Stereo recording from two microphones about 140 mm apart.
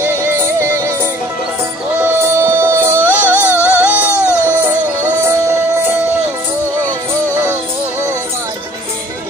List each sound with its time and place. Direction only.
0.0 s music: 15° right (ahead or behind)
2.0 s music: 15° right (ahead or behind)
3.0 s music: 15° left (ahead or behind)
3.6 s music: 10° right (ahead or behind)
4.1 s music: 15° left (ahead or behind)
4.6 s music: 15° right (ahead or behind)